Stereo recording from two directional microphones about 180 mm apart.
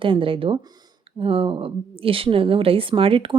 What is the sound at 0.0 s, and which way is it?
A woman's voice, 30° right (ahead or behind).